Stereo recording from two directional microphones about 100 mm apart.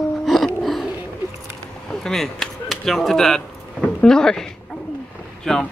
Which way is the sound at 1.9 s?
5° left (ahead or behind).